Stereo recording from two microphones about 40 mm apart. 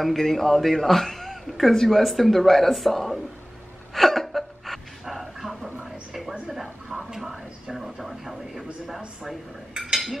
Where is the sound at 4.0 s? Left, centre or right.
Centre.